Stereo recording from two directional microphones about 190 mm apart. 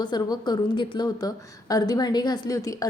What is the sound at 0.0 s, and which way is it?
A woman's voice, 25° left (ahead or behind).